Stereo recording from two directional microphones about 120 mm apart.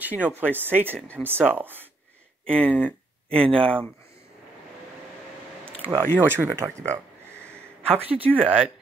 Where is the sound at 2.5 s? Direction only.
10° left (ahead or behind).